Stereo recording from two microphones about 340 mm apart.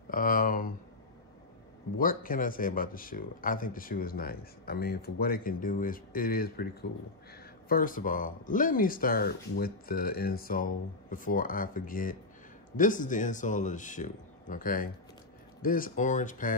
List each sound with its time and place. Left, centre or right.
0.1 s speech: left
2.0 s speech: left